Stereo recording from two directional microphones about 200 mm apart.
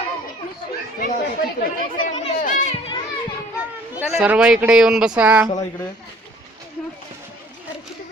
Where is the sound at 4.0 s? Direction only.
5° right (ahead or behind).